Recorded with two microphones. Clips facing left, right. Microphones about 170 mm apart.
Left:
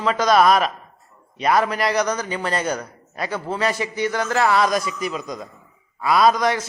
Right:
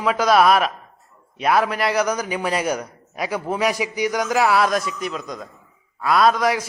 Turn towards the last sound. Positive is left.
turn(degrees=-5)  # may be behind; listen again after turning